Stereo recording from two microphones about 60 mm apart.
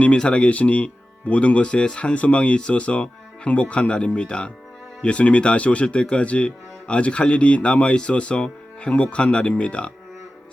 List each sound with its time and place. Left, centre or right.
0.0 s speech: centre